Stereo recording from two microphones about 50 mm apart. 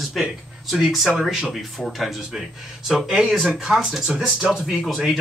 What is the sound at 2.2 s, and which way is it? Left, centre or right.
Speech, centre.